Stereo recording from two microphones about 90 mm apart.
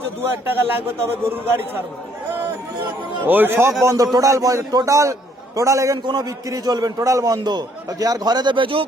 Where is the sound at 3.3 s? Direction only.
25° right (ahead or behind).